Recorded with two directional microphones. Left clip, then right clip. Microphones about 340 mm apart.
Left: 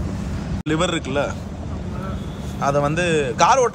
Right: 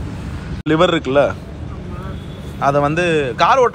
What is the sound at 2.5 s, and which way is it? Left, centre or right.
A man's voice, centre.